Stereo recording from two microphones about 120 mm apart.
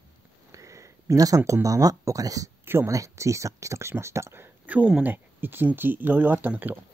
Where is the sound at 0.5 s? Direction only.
25° right (ahead or behind).